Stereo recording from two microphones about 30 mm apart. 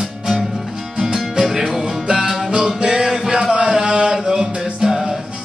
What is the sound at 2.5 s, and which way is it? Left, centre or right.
Music, right.